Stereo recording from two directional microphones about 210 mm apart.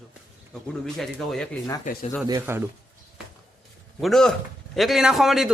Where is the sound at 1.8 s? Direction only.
40° left (ahead or behind).